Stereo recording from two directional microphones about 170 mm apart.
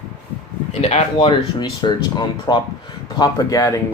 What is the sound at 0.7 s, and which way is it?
Speech, 40° left (ahead or behind).